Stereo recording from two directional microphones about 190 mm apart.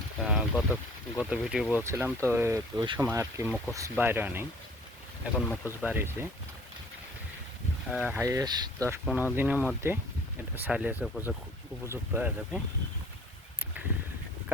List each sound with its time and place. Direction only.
0.3 s speech: 5° right (ahead or behind)
5.3 s speech: 10° left (ahead or behind)
5.8 s speech: 10° right (ahead or behind)
7.9 s speech: 5° right (ahead or behind)
9.0 s speech: 10° right (ahead or behind)
13.7 s a sound: 10° right (ahead or behind)